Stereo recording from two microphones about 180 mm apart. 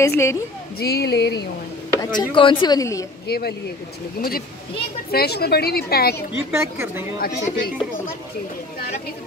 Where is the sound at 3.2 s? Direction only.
60° left (ahead or behind).